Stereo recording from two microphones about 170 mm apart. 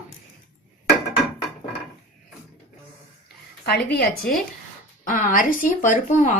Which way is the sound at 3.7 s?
65° left (ahead or behind).